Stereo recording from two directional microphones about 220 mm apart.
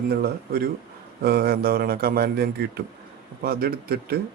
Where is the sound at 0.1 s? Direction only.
45° right (ahead or behind).